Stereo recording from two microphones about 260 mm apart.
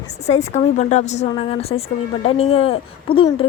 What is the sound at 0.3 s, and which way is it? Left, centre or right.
Speech, left.